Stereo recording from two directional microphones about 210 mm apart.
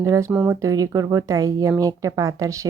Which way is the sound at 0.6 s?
15° right (ahead or behind).